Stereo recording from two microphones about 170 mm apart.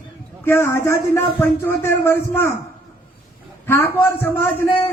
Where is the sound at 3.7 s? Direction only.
15° left (ahead or behind).